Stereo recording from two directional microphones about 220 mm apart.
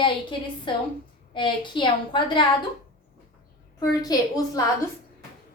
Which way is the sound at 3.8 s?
15° left (ahead or behind).